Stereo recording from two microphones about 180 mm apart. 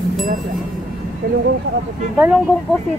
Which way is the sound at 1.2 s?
70° right (ahead or behind).